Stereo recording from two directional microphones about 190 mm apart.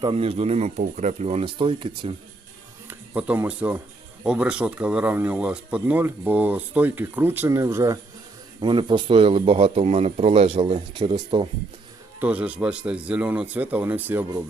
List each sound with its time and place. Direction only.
0.0 s speech: 30° right (ahead or behind)
2.8 s speech: 10° right (ahead or behind); by 11.4 s 25° right (ahead or behind)
12.2 s speech: 5° right (ahead or behind)